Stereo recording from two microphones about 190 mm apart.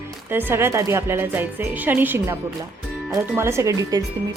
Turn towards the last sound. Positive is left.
turn(degrees=-20)  # may be behind; listen again after turning